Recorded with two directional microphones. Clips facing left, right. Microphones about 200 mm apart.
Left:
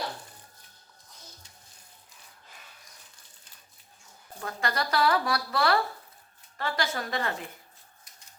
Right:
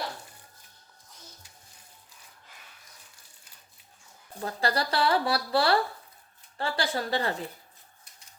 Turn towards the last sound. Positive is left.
turn(degrees=-30)  # may be behind; listen again after turning